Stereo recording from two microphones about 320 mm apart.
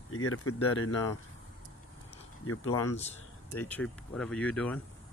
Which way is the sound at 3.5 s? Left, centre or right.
Centre.